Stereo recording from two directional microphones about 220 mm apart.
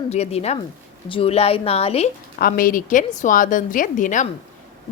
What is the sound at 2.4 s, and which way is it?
A woman's voice, 40° left (ahead or behind).